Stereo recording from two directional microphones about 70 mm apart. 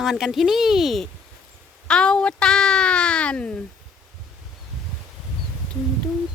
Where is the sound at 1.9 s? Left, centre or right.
Centre.